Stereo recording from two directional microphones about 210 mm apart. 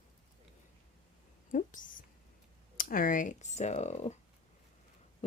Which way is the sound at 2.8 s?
40° left (ahead or behind).